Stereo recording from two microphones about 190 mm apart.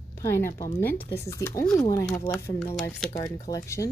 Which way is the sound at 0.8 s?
10° left (ahead or behind).